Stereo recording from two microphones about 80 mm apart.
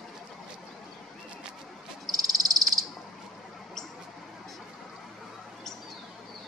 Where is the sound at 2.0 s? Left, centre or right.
Right.